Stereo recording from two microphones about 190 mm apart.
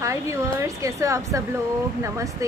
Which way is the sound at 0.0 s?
15° right (ahead or behind).